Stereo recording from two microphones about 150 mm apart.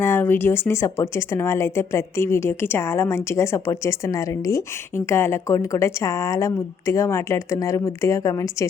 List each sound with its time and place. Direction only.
0.0 s a woman's voice: 15° left (ahead or behind)